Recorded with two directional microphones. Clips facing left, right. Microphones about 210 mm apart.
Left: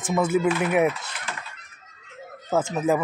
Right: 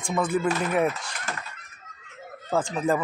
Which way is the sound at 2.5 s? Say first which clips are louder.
Left 2 dB; 5° left (ahead or behind).